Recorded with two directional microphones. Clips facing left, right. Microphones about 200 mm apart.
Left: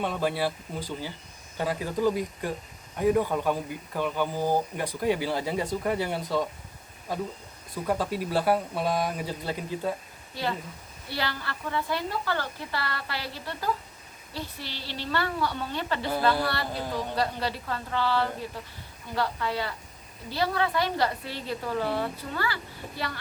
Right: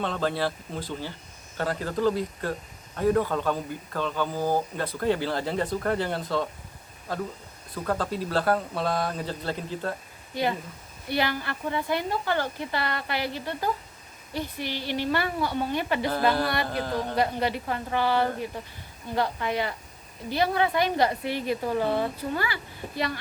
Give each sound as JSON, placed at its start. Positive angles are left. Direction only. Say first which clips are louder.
{"t": 0.0, "sound": "speech", "louder": "even", "side_deg": 10}
{"t": 7.9, "sound": "speech", "louder": "even", "side_deg": 10}
{"t": 11.1, "sound": "a woman's voice", "louder": "right 5 dB", "side_deg": -20}
{"t": 16.8, "sound": "speech", "louder": "right 2 dB", "side_deg": 15}
{"t": 17.2, "sound": "a woman's voice", "louder": "right 5 dB", "side_deg": -15}